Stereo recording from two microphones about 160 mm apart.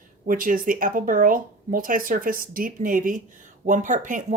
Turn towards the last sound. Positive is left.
turn(degrees=-55)  # may be behind; listen again after turning